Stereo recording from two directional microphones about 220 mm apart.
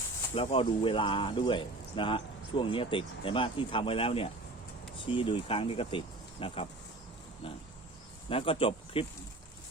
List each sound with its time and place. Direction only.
0.3 s speech: 25° left (ahead or behind)